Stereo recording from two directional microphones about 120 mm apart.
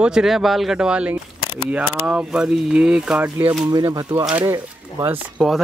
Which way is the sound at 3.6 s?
35° right (ahead or behind).